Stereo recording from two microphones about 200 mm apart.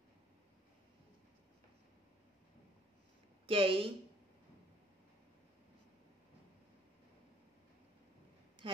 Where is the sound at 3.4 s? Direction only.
25° right (ahead or behind).